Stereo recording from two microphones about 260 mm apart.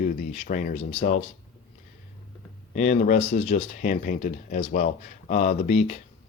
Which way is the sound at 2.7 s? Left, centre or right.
Left.